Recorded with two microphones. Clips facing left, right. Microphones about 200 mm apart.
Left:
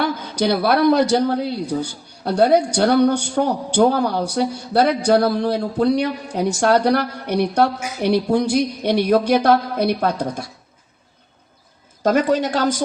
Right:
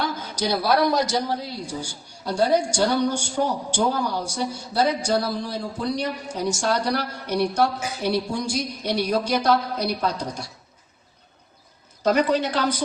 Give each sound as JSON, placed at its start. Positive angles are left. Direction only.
{"t": 0.2, "sound": "speech", "side_deg": 60}
{"t": 12.0, "sound": "a woman's voice", "side_deg": 45}